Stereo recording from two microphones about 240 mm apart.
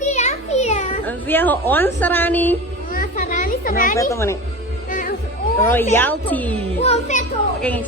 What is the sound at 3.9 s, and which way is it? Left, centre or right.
Speech, centre.